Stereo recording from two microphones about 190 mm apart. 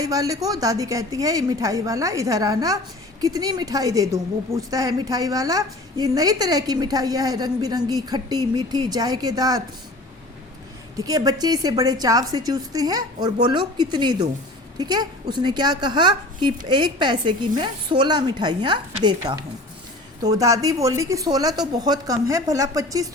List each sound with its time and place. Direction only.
0.0 s a woman's voice: 20° right (ahead or behind)
10.9 s a woman's voice: 20° right (ahead or behind)